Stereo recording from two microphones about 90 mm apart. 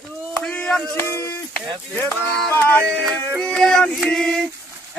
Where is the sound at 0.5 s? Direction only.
15° left (ahead or behind).